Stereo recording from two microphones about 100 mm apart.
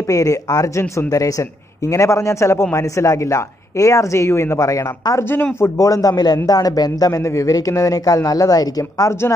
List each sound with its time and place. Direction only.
0.1 s a man's voice: 35° left (ahead or behind)
5.3 s a man's voice: 20° left (ahead or behind)
5.8 s a man's voice: 35° left (ahead or behind)